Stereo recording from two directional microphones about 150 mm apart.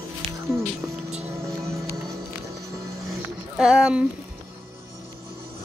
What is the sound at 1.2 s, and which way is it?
Music, 20° right (ahead or behind).